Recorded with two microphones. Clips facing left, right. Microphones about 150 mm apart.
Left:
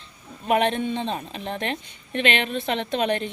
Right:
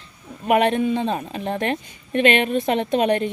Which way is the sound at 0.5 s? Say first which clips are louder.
Right 4 dB; 25° left (ahead or behind).